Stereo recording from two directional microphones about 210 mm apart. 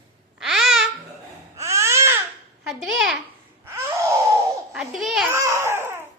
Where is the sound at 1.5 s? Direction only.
15° right (ahead or behind).